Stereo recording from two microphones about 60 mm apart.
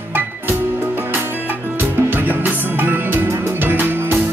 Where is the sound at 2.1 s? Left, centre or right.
Right.